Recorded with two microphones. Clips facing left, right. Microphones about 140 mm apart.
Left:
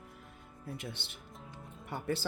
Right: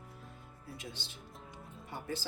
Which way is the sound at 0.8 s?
65° left (ahead or behind).